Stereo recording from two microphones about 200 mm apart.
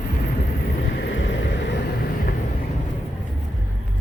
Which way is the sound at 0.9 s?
65° left (ahead or behind).